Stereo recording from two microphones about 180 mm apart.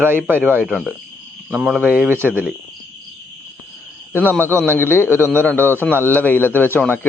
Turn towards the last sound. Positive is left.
turn(degrees=10)  # may be behind; listen again after turning